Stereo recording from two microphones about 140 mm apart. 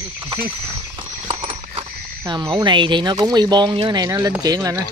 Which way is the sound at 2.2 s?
30° right (ahead or behind).